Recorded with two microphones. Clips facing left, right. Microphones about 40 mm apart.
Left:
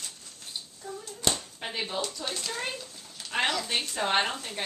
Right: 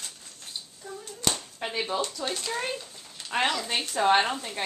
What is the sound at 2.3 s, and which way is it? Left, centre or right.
Speech, centre.